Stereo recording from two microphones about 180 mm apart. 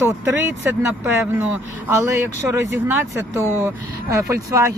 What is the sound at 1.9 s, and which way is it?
Speech, 15° right (ahead or behind).